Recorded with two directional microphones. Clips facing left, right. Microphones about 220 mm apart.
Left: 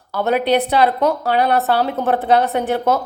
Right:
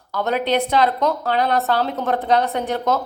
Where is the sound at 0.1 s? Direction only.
10° left (ahead or behind).